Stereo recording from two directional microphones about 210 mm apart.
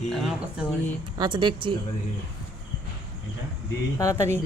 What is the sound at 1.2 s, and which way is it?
Speech, 20° right (ahead or behind).